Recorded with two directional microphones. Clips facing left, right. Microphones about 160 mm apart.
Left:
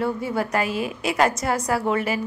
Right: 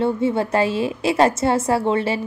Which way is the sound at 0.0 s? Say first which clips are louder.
Right 5 dB; 25° right (ahead or behind).